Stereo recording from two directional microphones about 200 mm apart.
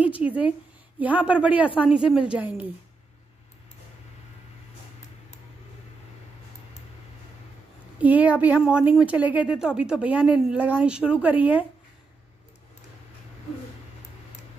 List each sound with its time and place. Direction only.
0.2 s speech: 5° right (ahead or behind)
8.0 s speech: 10° right (ahead or behind)